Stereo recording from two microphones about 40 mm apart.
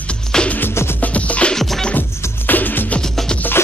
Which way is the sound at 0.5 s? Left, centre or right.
Left.